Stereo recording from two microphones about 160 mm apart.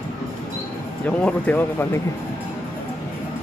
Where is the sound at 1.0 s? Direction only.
10° left (ahead or behind).